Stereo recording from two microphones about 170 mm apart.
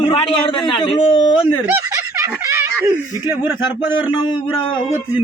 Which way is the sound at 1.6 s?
15° right (ahead or behind).